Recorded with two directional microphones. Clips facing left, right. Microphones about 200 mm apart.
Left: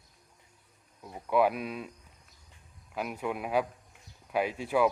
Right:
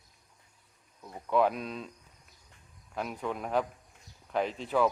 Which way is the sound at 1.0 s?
10° left (ahead or behind).